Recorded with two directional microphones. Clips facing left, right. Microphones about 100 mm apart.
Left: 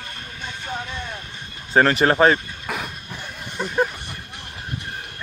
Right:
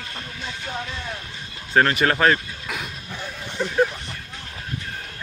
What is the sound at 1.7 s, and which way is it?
Speech, 30° left (ahead or behind).